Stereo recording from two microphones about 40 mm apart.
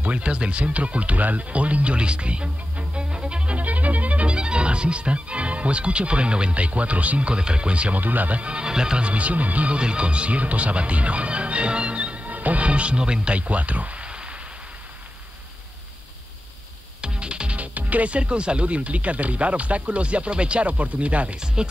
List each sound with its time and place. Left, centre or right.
0.0 s speech: right
4.3 s speech: right
8.0 s speech: right
8.4 s speech: right
9.0 s speech: right
9.8 s speech: right
17.0 s music: right
17.7 s speech: right
21.6 s speech: centre